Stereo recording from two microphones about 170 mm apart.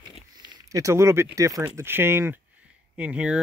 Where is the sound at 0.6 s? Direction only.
20° right (ahead or behind).